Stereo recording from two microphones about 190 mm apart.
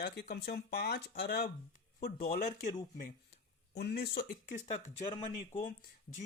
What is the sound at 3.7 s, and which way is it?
Speech, 60° left (ahead or behind).